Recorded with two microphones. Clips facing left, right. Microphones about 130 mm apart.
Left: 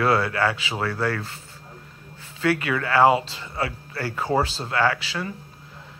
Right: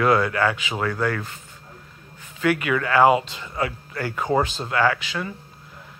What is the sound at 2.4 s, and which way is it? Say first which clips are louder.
Speech: right 1 dB; 30° left (ahead or behind).